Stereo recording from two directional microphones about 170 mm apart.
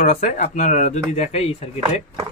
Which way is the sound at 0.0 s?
50° left (ahead or behind).